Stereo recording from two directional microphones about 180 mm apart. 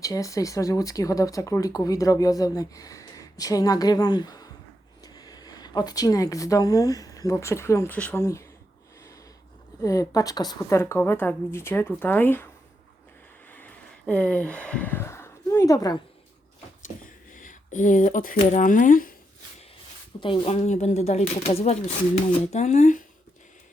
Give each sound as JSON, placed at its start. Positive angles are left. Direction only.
{"t": 0.0, "sound": "a woman's voice", "side_deg": 20}
{"t": 9.8, "sound": "a woman's voice", "side_deg": 20}
{"t": 13.5, "sound": "a sound", "side_deg": 10}
{"t": 17.3, "sound": "speech", "side_deg": 45}
{"t": 20.2, "sound": "speech", "side_deg": 30}